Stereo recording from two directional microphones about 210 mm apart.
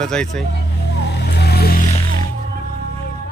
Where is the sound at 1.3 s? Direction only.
50° left (ahead or behind).